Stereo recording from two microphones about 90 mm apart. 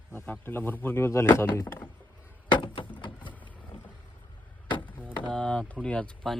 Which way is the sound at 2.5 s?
65° left (ahead or behind).